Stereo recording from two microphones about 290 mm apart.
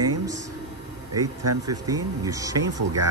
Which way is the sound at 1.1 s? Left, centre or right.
Right.